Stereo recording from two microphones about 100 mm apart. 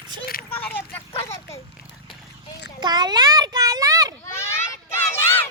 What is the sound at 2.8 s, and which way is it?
A child's voice, 45° right (ahead or behind).